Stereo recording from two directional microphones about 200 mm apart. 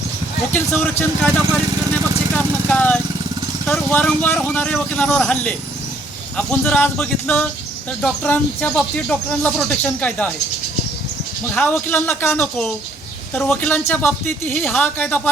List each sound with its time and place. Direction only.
0.5 s speech: 10° left (ahead or behind)
11.5 s speech: 5° left (ahead or behind)